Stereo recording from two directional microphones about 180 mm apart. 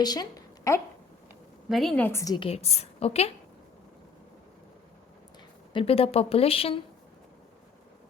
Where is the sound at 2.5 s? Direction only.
35° left (ahead or behind).